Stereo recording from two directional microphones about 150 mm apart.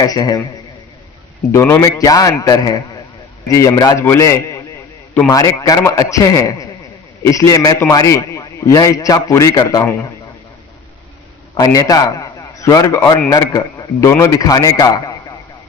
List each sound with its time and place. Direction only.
0.0 s a man's voice: 25° left (ahead or behind)
1.5 s a man's voice: 15° left (ahead or behind)
11.5 s a man's voice: 25° left (ahead or behind)